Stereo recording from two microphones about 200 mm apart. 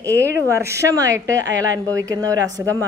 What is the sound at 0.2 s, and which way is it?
Speech, 15° right (ahead or behind).